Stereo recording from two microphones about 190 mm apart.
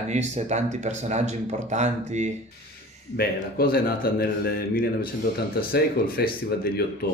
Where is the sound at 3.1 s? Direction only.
55° left (ahead or behind).